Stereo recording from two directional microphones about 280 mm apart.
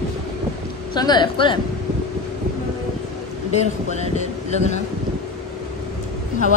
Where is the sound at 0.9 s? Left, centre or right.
Centre.